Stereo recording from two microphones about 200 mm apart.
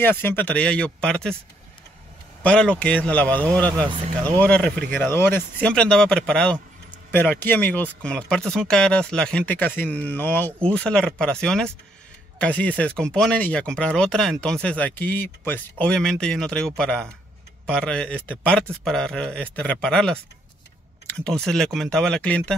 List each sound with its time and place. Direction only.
0.0 s speech: 10° left (ahead or behind)
2.4 s a man's voice: 5° left (ahead or behind)
3.8 s speech: 25° right (ahead or behind)
4.4 s speech: 5° left (ahead or behind)